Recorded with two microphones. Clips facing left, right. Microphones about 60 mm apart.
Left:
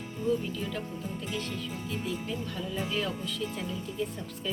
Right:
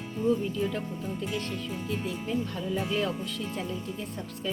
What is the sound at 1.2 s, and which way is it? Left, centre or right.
Speech, right.